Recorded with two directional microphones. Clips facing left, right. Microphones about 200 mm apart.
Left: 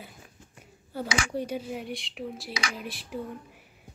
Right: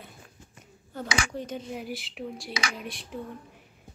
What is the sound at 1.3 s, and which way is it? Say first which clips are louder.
Female singing: left 3 dB; 10° left (ahead or behind).